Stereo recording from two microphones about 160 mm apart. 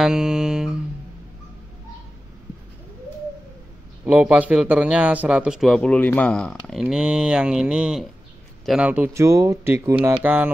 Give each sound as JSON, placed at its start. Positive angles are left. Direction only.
{"t": 0.0, "sound": "music", "side_deg": -5}
{"t": 4.0, "sound": "a man's voice", "side_deg": -5}